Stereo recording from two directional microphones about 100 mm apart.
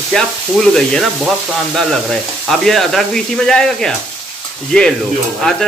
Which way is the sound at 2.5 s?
5° left (ahead or behind).